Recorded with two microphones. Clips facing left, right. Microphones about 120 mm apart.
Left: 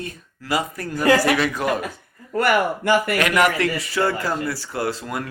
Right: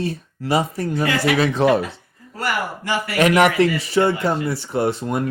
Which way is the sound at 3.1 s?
25° right (ahead or behind).